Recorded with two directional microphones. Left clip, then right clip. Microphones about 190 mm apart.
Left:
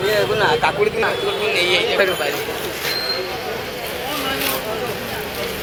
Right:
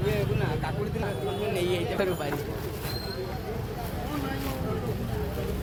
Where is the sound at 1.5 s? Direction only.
55° right (ahead or behind).